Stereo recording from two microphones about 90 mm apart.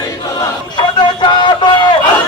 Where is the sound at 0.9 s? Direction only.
60° left (ahead or behind).